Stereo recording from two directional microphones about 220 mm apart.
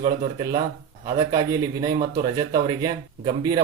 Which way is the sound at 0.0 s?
20° right (ahead or behind).